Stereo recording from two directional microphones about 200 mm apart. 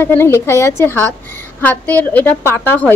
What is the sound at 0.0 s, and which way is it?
A woman's voice, 10° left (ahead or behind).